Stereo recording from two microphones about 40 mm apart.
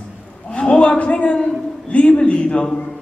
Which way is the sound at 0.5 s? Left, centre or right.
Left.